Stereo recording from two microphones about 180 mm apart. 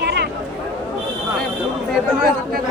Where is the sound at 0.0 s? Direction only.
65° right (ahead or behind).